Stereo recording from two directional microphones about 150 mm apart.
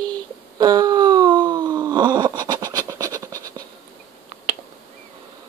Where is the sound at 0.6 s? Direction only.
25° right (ahead or behind).